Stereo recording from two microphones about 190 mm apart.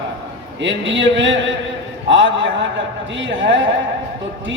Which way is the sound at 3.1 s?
75° right (ahead or behind).